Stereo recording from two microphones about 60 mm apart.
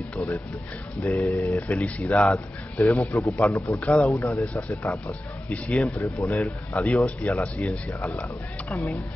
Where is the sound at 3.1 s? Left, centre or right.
Left.